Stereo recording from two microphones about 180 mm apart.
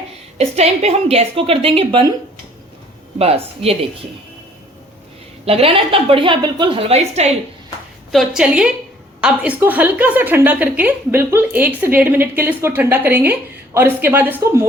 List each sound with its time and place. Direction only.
0.3 s a woman's voice: 35° right (ahead or behind)
3.2 s a woman's voice: 35° right (ahead or behind)
5.5 s a woman's voice: 30° right (ahead or behind)
8.1 s a woman's voice: centre (ahead or behind)